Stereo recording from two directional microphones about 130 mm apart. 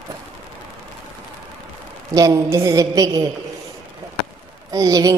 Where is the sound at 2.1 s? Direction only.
30° right (ahead or behind).